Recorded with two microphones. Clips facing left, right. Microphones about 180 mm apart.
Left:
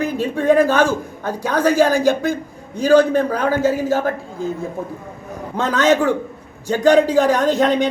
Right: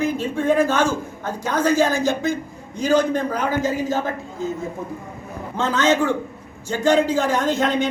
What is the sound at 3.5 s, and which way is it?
Speech, 15° right (ahead or behind).